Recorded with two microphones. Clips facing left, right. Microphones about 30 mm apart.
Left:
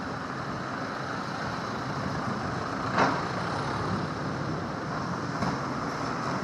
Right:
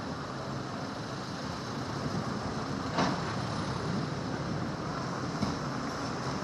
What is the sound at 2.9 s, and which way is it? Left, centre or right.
Vehicle, left.